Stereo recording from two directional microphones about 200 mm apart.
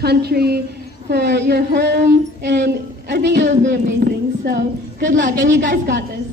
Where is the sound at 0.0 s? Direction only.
55° right (ahead or behind).